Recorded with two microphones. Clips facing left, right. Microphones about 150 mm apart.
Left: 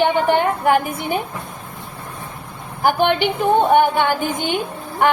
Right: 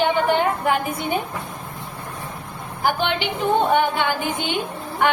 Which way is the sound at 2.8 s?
50° left (ahead or behind).